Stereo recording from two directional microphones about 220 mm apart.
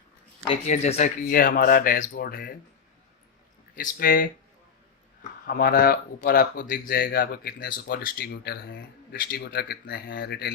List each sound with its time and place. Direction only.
0.4 s speech: 30° left (ahead or behind); by 2.6 s 45° left (ahead or behind)
3.8 s speech: 40° left (ahead or behind)
5.5 s speech: 40° left (ahead or behind)